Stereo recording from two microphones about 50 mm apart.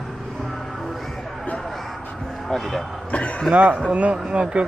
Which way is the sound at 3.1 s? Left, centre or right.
Left.